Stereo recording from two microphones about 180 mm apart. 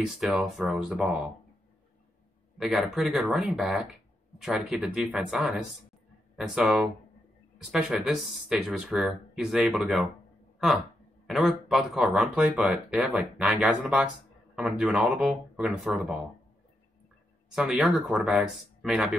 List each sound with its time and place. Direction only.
0.0 s speech: 5° right (ahead or behind)
2.6 s speech: centre (ahead or behind)
11.2 s speech: centre (ahead or behind)
17.5 s speech: centre (ahead or behind)